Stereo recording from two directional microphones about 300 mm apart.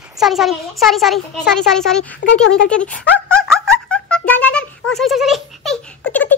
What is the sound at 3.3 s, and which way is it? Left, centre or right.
Music, centre.